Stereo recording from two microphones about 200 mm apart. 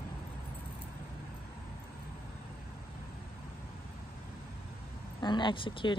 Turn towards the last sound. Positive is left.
turn(degrees=25)  # may be behind; listen again after turning